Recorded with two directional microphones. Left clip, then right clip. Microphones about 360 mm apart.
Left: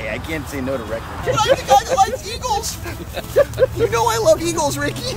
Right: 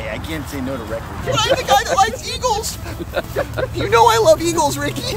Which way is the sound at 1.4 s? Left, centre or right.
Centre.